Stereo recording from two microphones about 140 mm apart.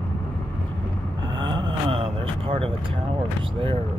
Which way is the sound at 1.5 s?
35° right (ahead or behind).